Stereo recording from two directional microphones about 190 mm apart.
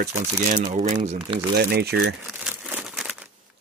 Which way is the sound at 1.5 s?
55° right (ahead or behind).